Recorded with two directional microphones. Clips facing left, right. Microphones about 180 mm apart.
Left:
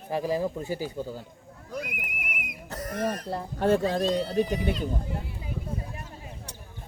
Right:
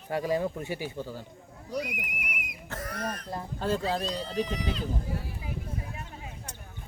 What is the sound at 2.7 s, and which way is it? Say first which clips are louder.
Speech: left 5 dB; 35° left (ahead or behind).